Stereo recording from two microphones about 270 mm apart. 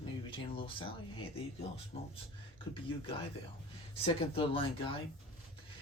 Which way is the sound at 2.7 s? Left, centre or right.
Centre.